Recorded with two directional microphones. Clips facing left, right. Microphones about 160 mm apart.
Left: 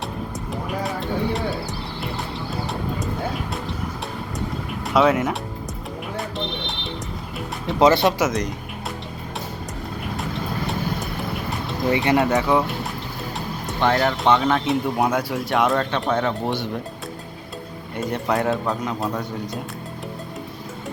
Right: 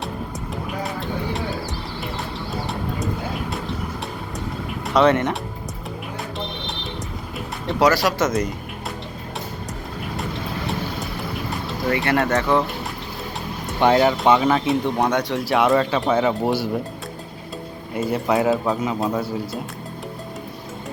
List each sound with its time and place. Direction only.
0.7 s music: centre (ahead or behind)
3.5 s vehicle: centre (ahead or behind)
4.9 s speech: 5° left (ahead or behind)
6.1 s music: centre (ahead or behind)
7.8 s speech: 25° left (ahead or behind)
8.2 s speech: centre (ahead or behind)
11.9 s speech: 20° left (ahead or behind)
13.7 s speech: 15° right (ahead or behind)
17.9 s speech: 5° right (ahead or behind)